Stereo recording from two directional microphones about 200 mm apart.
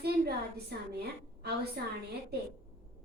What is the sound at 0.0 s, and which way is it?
A woman's voice, 50° right (ahead or behind).